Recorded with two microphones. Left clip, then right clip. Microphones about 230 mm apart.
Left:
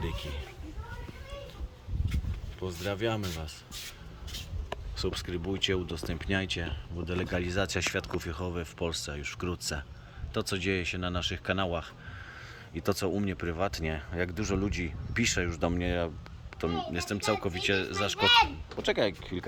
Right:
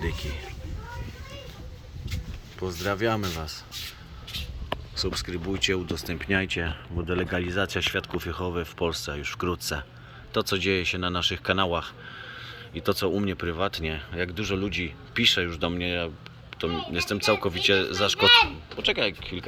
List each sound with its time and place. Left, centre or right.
0.0 s speech: centre
2.6 s speech: centre
4.9 s speech: centre
18.3 s a child's voice: left